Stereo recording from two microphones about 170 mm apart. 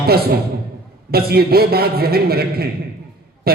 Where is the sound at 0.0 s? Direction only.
65° right (ahead or behind).